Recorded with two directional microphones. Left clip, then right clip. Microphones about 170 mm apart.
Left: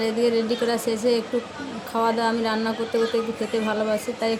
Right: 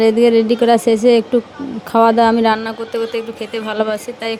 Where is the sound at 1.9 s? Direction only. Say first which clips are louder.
Right 11 dB; 50° right (ahead or behind).